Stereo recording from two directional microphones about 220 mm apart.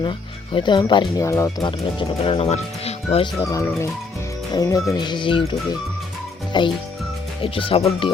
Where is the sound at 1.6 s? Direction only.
25° left (ahead or behind).